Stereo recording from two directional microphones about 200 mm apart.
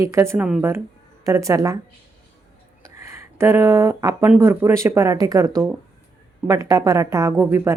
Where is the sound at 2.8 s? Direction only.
15° right (ahead or behind).